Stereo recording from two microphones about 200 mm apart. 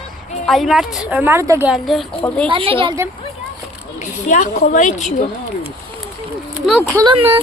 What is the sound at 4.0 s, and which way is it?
A woman's voice, 40° left (ahead or behind).